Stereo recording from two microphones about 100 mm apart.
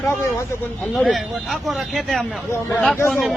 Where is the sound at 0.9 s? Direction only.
Centre (ahead or behind).